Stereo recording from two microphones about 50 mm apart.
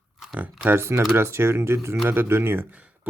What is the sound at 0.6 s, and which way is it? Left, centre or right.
Speech, right.